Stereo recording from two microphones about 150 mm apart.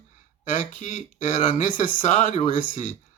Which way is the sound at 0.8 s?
60° left (ahead or behind).